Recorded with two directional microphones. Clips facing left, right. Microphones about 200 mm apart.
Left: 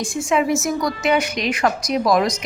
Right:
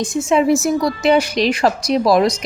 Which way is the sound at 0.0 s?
20° right (ahead or behind).